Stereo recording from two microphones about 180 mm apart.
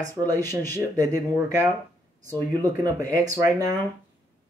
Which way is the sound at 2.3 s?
20° right (ahead or behind).